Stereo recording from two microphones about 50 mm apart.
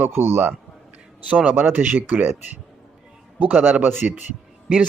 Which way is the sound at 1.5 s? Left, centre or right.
Right.